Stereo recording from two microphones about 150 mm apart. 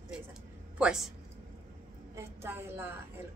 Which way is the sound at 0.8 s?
5° right (ahead or behind).